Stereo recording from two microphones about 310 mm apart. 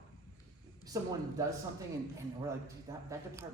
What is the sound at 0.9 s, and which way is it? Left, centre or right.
Speech, centre.